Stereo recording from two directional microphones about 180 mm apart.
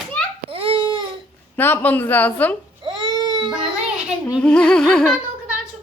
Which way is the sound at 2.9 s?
25° right (ahead or behind).